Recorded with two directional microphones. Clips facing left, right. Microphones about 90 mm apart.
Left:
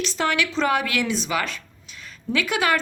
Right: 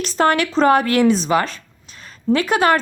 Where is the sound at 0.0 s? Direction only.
45° right (ahead or behind).